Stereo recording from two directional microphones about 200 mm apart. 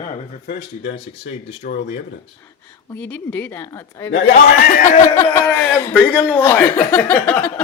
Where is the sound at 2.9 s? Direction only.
10° left (ahead or behind).